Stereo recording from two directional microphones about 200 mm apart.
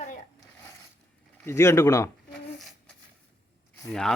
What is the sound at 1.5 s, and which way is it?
Speech, 15° left (ahead or behind).